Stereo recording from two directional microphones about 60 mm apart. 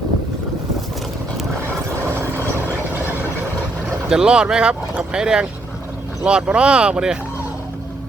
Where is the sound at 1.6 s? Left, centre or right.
Right.